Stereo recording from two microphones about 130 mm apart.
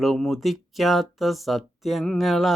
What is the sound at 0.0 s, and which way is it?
Speech, centre (ahead or behind).